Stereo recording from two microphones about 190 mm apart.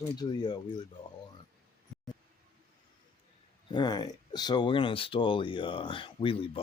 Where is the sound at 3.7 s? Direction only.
20° left (ahead or behind).